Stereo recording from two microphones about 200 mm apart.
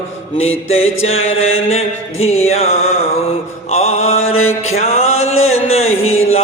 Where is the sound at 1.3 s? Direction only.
85° left.